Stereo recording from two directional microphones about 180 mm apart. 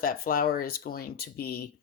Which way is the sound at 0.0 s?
55° left (ahead or behind).